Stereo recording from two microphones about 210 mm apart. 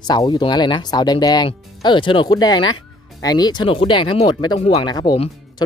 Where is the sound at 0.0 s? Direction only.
20° left (ahead or behind).